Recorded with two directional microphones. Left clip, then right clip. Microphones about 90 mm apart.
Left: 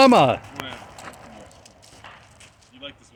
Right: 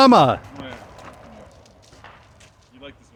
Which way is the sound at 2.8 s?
20° right (ahead or behind).